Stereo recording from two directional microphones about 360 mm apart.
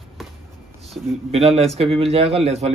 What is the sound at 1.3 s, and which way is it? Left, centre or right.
A man's voice, centre.